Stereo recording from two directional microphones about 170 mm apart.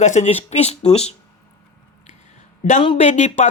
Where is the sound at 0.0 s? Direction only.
45° left (ahead or behind).